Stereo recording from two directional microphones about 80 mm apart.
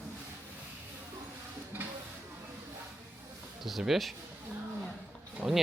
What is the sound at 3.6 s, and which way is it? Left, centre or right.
Speech, centre.